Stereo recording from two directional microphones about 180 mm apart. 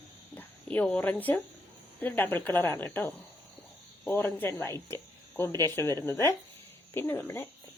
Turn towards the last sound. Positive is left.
turn(degrees=15)  # may be behind; listen again after turning